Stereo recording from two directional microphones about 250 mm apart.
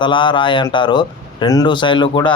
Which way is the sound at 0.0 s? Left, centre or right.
Centre.